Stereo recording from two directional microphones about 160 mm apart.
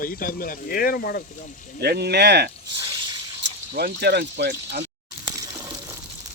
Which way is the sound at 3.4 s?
90° right.